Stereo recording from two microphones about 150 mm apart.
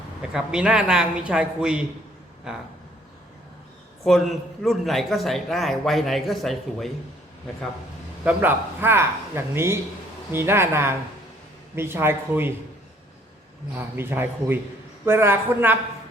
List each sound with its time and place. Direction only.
0.2 s a man's voice: 5° right (ahead or behind)
4.0 s a man's voice: centre (ahead or behind)
8.2 s a man's voice: 10° right (ahead or behind)
13.7 s a man's voice: 15° right (ahead or behind)